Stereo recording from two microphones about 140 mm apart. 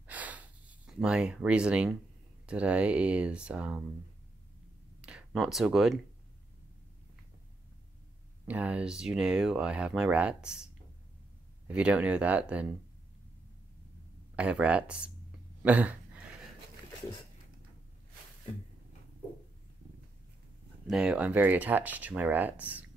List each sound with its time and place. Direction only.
0.0 s gasp: 10° right (ahead or behind)
2.4 s speech: 10° right (ahead or behind)
5.0 s speech: 5° right (ahead or behind)
8.5 s speech: 10° right (ahead or behind)
14.3 s speech: 10° right (ahead or behind)
15.6 s a sound: 10° right (ahead or behind)
20.9 s speech: 5° right (ahead or behind)